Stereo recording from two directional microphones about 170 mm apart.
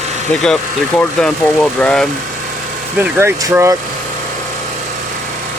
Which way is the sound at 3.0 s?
15° right (ahead or behind).